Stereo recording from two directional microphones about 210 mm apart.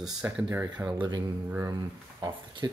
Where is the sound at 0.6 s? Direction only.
20° right (ahead or behind).